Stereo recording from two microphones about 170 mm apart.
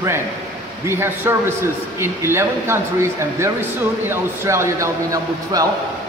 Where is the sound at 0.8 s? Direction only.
15° right (ahead or behind).